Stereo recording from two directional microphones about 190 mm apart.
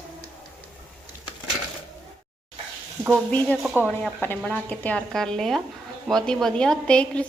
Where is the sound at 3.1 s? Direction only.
5° left (ahead or behind).